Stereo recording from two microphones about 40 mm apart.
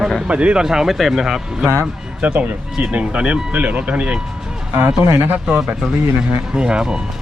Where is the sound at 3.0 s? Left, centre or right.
Right.